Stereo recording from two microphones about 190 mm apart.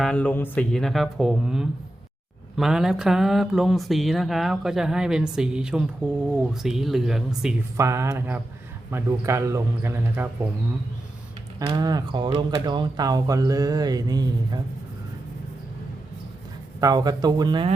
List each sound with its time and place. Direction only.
0.0 s speech: 5° left (ahead or behind)
7.8 s a man's voice: 15° right (ahead or behind)
11.7 s speech: 20° right (ahead or behind)
16.8 s speech: 20° right (ahead or behind)